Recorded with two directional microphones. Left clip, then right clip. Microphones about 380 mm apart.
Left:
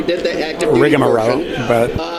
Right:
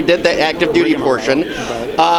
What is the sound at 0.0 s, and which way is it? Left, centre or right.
Speech, right.